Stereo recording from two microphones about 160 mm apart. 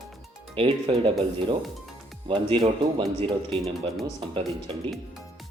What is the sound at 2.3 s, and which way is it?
Speech, 35° right (ahead or behind).